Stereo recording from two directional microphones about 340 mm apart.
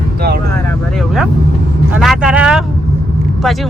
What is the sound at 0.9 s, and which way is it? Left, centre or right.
Speech, centre.